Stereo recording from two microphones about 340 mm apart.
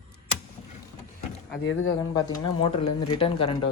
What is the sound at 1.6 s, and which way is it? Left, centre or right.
Speech, left.